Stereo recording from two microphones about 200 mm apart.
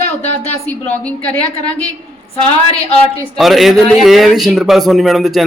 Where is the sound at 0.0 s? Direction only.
35° left (ahead or behind).